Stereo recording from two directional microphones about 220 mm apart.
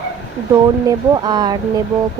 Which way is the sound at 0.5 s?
15° right (ahead or behind).